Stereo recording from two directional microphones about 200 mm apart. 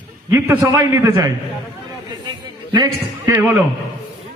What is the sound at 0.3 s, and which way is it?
A man's voice, 10° right (ahead or behind).